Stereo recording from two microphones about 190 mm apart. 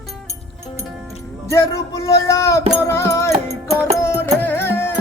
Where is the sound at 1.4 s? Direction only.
15° left (ahead or behind).